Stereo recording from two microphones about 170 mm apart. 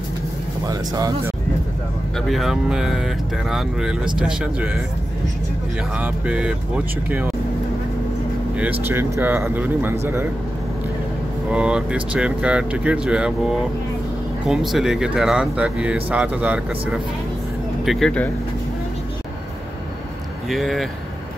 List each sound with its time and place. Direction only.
0.7 s speech: 20° right (ahead or behind)
2.1 s speech: centre (ahead or behind)
5.9 s speech: 10° right (ahead or behind)
8.8 s speech: 15° right (ahead or behind)
11.5 s speech: 5° right (ahead or behind)
17.8 s speech: centre (ahead or behind)
20.4 s speech: centre (ahead or behind)